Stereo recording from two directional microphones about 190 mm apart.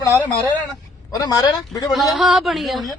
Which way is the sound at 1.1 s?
20° left (ahead or behind).